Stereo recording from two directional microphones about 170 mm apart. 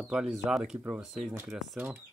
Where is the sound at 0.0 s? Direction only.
5° right (ahead or behind).